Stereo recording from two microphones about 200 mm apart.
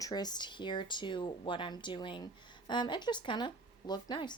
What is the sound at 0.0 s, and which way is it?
Speech, 20° left (ahead or behind).